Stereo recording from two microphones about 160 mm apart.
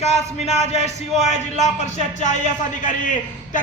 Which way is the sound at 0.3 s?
40° left (ahead or behind).